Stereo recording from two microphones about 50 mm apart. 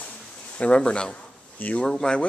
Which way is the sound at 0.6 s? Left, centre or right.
Left.